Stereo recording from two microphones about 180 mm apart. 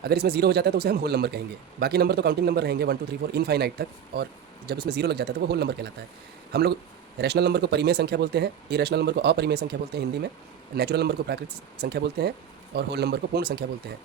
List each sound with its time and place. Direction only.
0.0 s speech: 60° right (ahead or behind)